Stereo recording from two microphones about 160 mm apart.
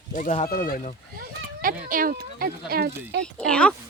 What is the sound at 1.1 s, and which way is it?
Speech, 60° right (ahead or behind).